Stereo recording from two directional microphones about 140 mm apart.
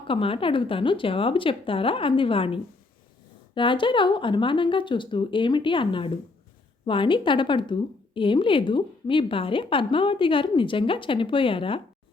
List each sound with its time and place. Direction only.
0.1 s a woman's voice: 40° left (ahead or behind)